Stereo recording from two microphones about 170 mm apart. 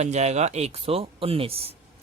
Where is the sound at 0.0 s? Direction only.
40° right (ahead or behind).